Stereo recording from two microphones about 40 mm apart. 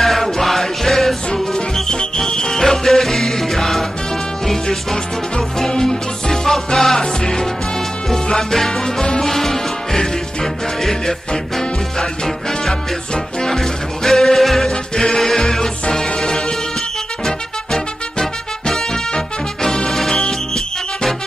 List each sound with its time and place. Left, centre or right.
0.0 s music: centre
5.6 s music: centre
14.7 s music: centre
17.7 s music: centre